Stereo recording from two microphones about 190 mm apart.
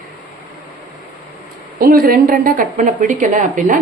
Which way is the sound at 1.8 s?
50° right (ahead or behind).